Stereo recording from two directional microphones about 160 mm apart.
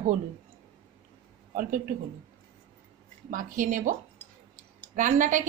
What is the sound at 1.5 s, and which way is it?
Speech, 60° right (ahead or behind).